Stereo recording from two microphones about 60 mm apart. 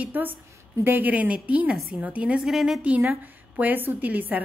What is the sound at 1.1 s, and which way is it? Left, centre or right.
Speech, right.